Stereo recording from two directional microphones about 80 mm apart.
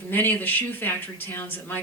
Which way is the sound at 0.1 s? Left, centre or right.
Left.